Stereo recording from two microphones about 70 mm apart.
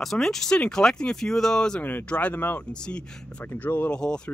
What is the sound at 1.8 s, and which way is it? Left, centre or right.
Speech, left.